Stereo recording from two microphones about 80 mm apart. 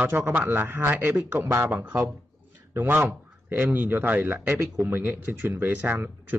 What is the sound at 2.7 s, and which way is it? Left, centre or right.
A man's voice, right.